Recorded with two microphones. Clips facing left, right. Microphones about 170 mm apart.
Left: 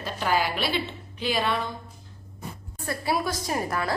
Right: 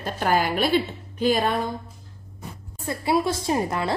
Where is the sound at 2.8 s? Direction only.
25° right (ahead or behind).